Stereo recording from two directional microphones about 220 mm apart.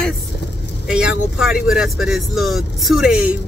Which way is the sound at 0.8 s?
5° right (ahead or behind).